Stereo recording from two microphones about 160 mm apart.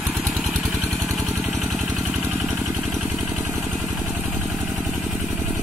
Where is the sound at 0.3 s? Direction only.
Centre (ahead or behind).